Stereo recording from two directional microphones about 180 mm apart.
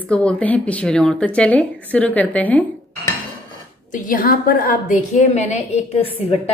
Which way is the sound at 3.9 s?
50° left (ahead or behind).